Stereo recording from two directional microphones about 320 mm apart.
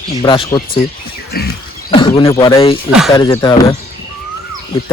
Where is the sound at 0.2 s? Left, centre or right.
Centre.